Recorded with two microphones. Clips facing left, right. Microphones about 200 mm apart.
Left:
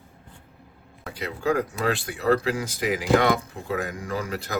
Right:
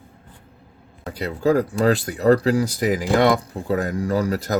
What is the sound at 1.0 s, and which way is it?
Speech, 35° right (ahead or behind).